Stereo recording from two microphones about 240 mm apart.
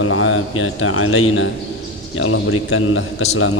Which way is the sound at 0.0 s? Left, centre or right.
Left.